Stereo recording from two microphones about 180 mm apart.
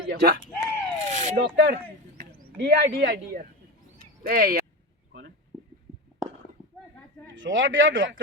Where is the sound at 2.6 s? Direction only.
65° right (ahead or behind).